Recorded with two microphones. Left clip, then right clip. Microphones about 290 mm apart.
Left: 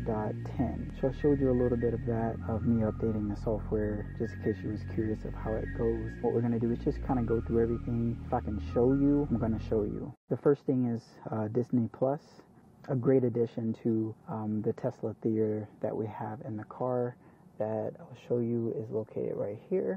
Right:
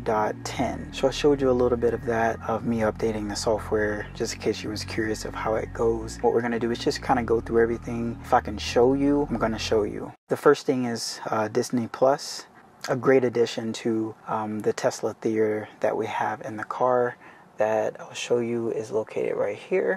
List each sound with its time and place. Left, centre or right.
0.0 s speech: centre
3.1 s speech: centre
8.8 s speech: centre
9.5 s speech: centre
12.8 s speech: centre